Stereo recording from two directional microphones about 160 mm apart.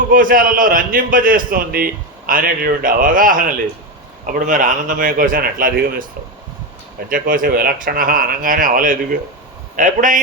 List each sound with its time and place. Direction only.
0.1 s a man's voice: 60° right (ahead or behind)
7.1 s a man's voice: 60° right (ahead or behind)